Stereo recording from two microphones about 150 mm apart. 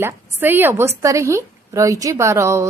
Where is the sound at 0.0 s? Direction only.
15° right (ahead or behind).